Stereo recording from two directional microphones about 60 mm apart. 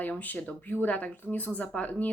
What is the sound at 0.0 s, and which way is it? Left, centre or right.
Speech, left.